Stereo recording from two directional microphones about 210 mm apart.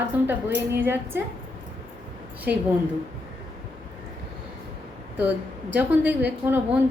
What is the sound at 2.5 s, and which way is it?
Speech, 45° right (ahead or behind).